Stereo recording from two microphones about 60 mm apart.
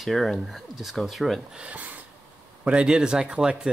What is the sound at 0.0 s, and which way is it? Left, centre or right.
Speech, centre.